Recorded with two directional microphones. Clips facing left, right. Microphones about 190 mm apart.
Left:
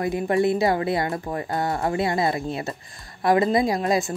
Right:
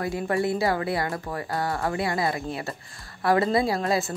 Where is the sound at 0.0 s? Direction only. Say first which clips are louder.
Left 4 dB; 20° left (ahead or behind).